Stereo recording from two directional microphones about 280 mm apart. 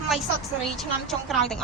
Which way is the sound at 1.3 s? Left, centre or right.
Centre.